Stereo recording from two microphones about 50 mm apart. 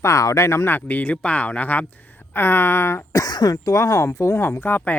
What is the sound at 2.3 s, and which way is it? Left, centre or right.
Speech, left.